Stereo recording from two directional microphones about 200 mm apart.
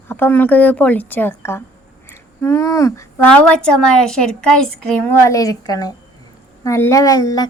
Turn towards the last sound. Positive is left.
turn(degrees=15)  # may be behind; listen again after turning